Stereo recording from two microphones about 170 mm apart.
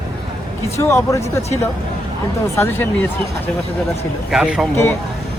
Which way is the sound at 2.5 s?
15° left (ahead or behind).